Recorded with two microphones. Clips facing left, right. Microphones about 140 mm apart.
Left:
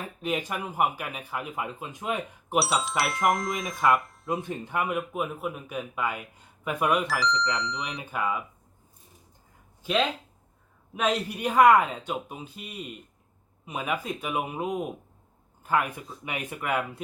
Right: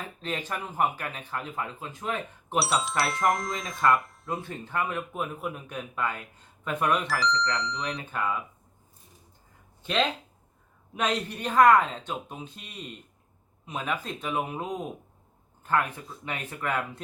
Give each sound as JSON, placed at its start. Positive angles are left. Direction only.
{"t": 0.2, "sound": "speech", "side_deg": 10}
{"t": 2.6, "sound": "speech", "side_deg": 0}
{"t": 4.4, "sound": "speech", "side_deg": 15}
{"t": 9.8, "sound": "speech", "side_deg": 5}